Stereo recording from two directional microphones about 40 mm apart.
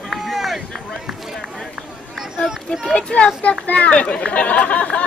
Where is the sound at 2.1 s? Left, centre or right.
Centre.